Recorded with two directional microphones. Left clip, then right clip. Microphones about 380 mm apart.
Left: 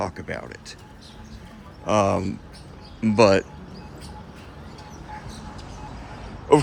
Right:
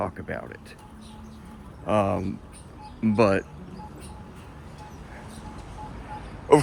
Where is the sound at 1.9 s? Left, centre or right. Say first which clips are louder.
Left 3 dB; centre.